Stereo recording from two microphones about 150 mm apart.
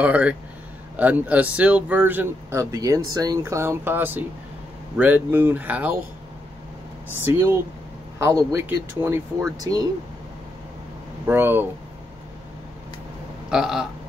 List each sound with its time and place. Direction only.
0.0 s speech: 10° right (ahead or behind)
7.2 s speech: 15° right (ahead or behind)
11.2 s speech: 15° right (ahead or behind)
13.5 s a sound: 5° right (ahead or behind)